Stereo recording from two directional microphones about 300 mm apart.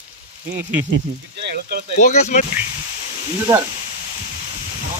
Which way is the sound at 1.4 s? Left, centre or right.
Right.